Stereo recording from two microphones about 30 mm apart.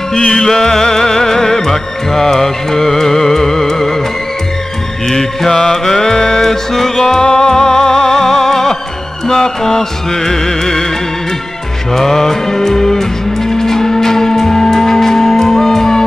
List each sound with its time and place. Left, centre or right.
0.1 s music: left
5.0 s music: centre
7.0 s music: left
11.9 s music: centre